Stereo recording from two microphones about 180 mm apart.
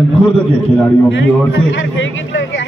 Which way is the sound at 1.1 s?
90° left.